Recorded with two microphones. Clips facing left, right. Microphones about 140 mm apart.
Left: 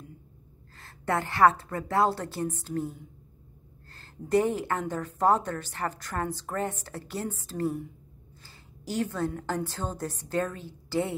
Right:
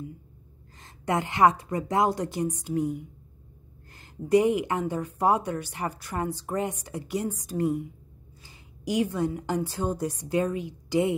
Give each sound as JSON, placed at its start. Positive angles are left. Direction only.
{"t": 0.7, "sound": "a woman's voice", "side_deg": -15}